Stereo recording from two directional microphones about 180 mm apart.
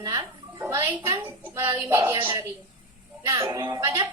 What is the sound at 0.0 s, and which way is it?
A child's voice, 20° right (ahead or behind).